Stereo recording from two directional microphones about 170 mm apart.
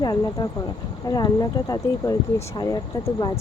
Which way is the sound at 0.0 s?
25° left (ahead or behind).